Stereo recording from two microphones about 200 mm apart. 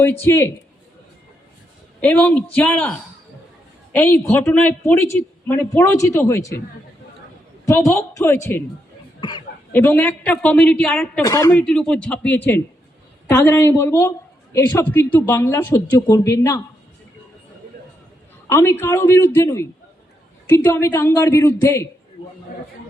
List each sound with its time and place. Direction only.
0.0 s speech: 10° left (ahead or behind)
2.0 s speech: 5° left (ahead or behind)
7.6 s speech: 15° left (ahead or behind)
9.7 s speech: 10° left (ahead or behind)
11.2 s speech: 15° left (ahead or behind)
11.6 s speech: 5° left (ahead or behind)
18.4 s speech: 15° left (ahead or behind)